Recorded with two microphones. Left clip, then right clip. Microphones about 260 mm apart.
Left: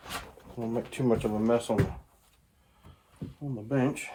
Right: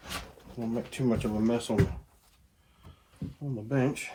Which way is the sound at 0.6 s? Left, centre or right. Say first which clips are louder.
Left 2 dB; left.